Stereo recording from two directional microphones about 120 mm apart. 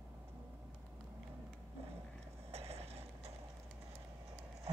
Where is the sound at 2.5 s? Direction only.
60° right (ahead or behind).